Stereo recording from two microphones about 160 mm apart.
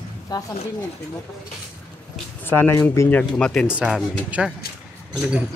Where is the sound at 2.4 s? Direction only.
15° left (ahead or behind).